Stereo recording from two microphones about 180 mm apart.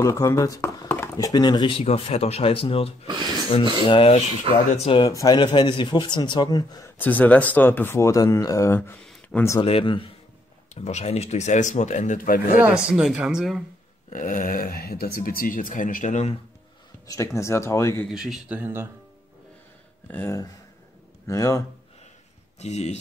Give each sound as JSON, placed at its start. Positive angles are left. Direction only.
{"t": 0.0, "sound": "speech", "side_deg": 15}
{"t": 1.1, "sound": "speech", "side_deg": 20}
{"t": 3.1, "sound": "a sound", "side_deg": -25}
{"t": 3.8, "sound": "speech", "side_deg": 30}
{"t": 9.0, "sound": "a sound", "side_deg": 10}
{"t": 9.6, "sound": "speech", "side_deg": 30}
{"t": 12.6, "sound": "speech", "side_deg": -5}
{"t": 14.1, "sound": "speech", "side_deg": 45}
{"t": 17.1, "sound": "speech", "side_deg": 15}
{"t": 18.1, "sound": "a man's voice", "side_deg": -5}
{"t": 20.1, "sound": "speech", "side_deg": 10}
{"t": 22.6, "sound": "speech", "side_deg": 35}